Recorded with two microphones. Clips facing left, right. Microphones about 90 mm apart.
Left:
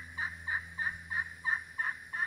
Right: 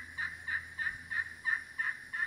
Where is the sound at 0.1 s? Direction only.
20° left (ahead or behind).